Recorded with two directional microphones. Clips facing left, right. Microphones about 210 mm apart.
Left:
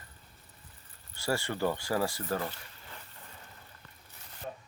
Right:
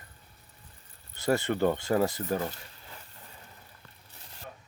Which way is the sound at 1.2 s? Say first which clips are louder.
Right 5 dB; 20° right (ahead or behind).